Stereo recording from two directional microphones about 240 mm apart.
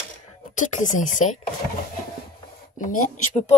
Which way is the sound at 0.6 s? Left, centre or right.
Left.